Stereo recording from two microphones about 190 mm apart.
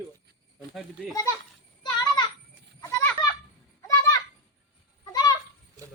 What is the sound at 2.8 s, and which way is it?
Children playing, 15° left (ahead or behind).